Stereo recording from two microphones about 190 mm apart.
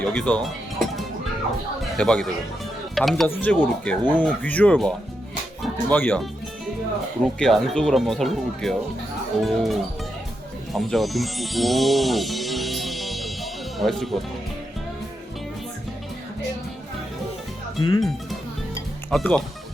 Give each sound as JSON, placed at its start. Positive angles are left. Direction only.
{"t": 0.0, "sound": "music", "side_deg": 5}
{"t": 1.8, "sound": "speech", "side_deg": 5}
{"t": 7.3, "sound": "speech", "side_deg": 0}
{"t": 10.7, "sound": "music", "side_deg": 0}
{"t": 17.7, "sound": "speech", "side_deg": 25}
{"t": 19.1, "sound": "speech", "side_deg": 0}